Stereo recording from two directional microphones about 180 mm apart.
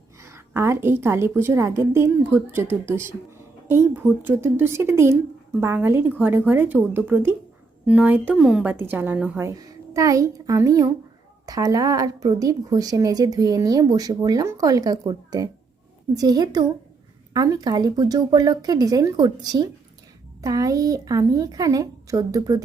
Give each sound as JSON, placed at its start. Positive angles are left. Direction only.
{"t": 0.2, "sound": "a woman's voice", "side_deg": -15}
{"t": 9.5, "sound": "a child's voice", "side_deg": -20}